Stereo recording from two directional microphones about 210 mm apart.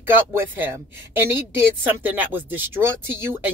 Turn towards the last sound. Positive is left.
turn(degrees=-10)  # may be behind; listen again after turning